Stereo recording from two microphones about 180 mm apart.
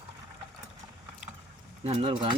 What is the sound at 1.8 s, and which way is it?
Speech, 35° right (ahead or behind).